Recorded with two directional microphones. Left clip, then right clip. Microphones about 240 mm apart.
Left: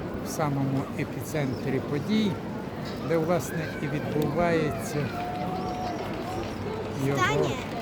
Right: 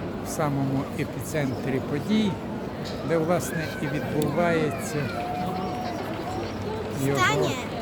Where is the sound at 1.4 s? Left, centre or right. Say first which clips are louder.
Right 2 dB; centre.